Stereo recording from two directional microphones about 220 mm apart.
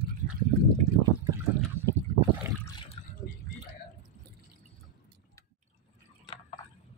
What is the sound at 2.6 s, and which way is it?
Water, 20° left (ahead or behind).